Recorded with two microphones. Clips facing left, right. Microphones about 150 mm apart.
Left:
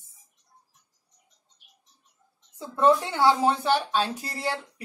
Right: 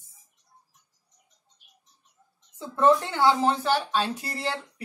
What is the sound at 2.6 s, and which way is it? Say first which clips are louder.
Speech: even; 15° left (ahead or behind).